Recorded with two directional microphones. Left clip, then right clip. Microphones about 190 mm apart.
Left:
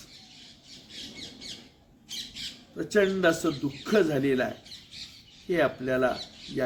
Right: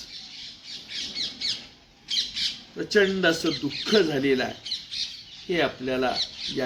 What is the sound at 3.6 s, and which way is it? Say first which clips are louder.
Speech: right 3 dB; 15° left (ahead or behind).